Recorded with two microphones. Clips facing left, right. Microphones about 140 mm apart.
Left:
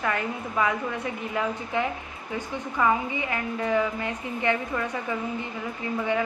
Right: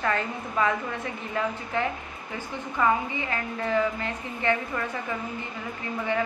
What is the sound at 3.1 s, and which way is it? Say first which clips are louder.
A woman's voice: left 2 dB; 15° left (ahead or behind).